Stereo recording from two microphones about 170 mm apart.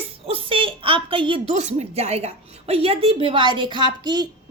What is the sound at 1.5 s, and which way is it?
A woman's voice, 40° right (ahead or behind).